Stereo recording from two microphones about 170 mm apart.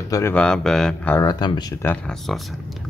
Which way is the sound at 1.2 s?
25° left (ahead or behind).